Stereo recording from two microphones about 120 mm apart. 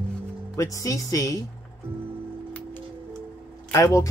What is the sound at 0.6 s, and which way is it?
Speech, 25° left (ahead or behind).